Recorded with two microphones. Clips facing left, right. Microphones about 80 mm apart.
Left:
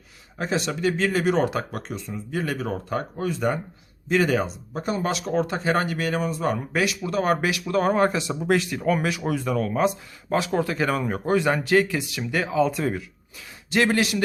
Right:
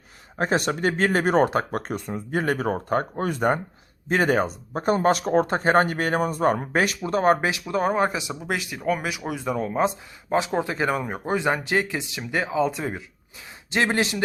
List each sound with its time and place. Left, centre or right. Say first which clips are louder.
0.3 s speech: right 3 dB; right
7.6 s speech: left 2 dB; centre